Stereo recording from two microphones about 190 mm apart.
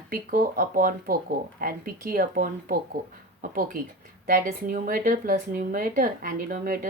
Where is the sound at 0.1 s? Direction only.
45° right (ahead or behind).